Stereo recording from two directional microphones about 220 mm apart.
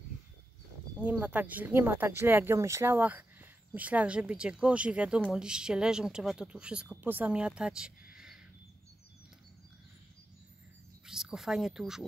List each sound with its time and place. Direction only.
1.0 s speech: 5° right (ahead or behind)
11.1 s speech: centre (ahead or behind)